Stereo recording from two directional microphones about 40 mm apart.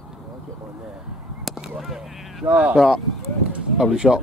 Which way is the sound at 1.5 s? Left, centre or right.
Centre.